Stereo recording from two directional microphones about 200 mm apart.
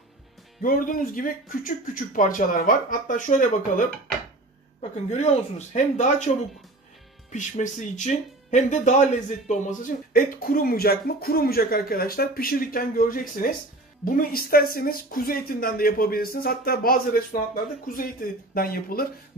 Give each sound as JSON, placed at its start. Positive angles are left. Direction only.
{"t": 0.6, "sound": "speech", "side_deg": 45}
{"t": 4.9, "sound": "speech", "side_deg": 30}
{"t": 7.3, "sound": "speech", "side_deg": 40}